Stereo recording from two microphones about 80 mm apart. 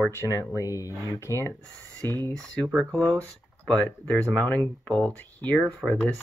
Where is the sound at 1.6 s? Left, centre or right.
Centre.